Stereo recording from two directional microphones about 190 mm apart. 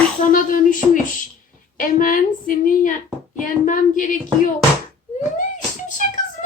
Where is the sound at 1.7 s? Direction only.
45° left (ahead or behind).